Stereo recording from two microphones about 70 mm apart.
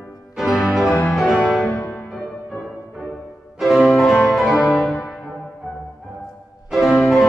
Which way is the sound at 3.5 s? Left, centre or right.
Centre.